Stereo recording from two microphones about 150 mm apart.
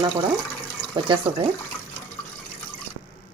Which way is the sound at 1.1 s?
35° right (ahead or behind).